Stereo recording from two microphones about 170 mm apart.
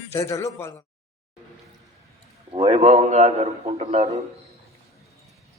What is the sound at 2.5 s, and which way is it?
A man's voice, 35° right (ahead or behind).